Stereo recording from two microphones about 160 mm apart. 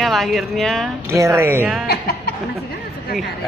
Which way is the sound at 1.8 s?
75° left (ahead or behind).